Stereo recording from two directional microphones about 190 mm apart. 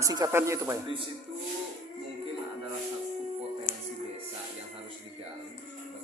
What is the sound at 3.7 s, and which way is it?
Music, 45° left (ahead or behind).